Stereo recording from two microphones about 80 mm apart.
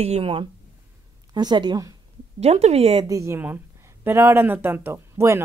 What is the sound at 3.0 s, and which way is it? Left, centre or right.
Speech, right.